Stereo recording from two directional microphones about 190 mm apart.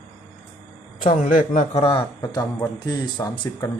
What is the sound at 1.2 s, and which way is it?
Speech, 40° left (ahead or behind).